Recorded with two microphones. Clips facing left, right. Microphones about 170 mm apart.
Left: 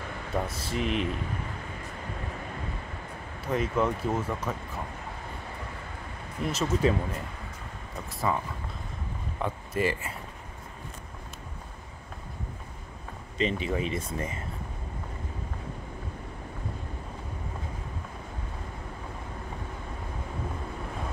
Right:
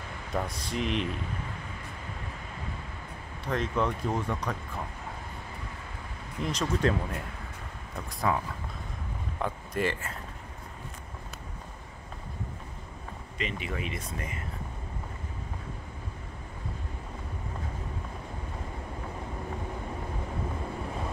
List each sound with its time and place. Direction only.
0.5 s speech: 5° left (ahead or behind)
3.4 s speech: 10° left (ahead or behind)
6.4 s speech: 5° left (ahead or behind)
8.2 s speech: centre (ahead or behind)
13.4 s speech: 30° left (ahead or behind)